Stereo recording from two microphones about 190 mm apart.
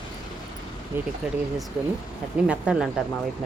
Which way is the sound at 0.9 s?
10° right (ahead or behind).